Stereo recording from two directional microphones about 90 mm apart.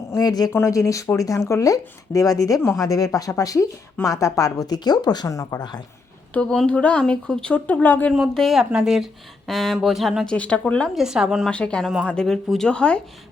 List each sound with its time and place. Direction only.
0.2 s speech: 45° left (ahead or behind)
0.5 s speech: 30° left (ahead or behind)
6.3 s speech: 10° left (ahead or behind)
8.3 s speech: 5° left (ahead or behind)
10.3 s speech: 15° left (ahead or behind)
10.9 s speech: 5° right (ahead or behind)
11.5 s speech: 10° left (ahead or behind)